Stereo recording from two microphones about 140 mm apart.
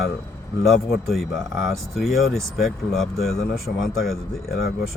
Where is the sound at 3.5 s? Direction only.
90° left.